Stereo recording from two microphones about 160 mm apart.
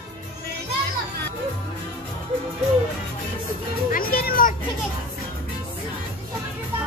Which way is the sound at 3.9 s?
70° left (ahead or behind).